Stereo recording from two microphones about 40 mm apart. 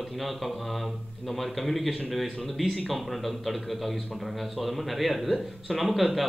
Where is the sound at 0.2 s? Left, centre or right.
Centre.